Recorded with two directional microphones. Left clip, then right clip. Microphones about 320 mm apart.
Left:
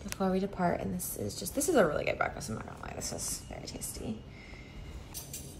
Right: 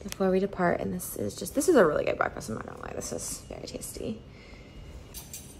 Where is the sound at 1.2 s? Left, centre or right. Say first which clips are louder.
Right 5 dB; centre.